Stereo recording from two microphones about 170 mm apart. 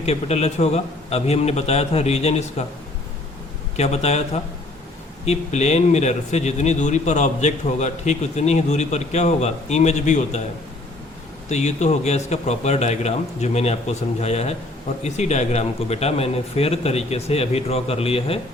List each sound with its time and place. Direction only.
0.0 s speech: 40° left (ahead or behind)
3.8 s speech: 40° left (ahead or behind)
11.4 s speech: 40° left (ahead or behind)